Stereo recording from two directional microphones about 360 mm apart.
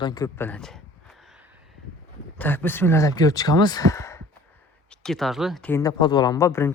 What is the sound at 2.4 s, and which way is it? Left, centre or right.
Speech, centre.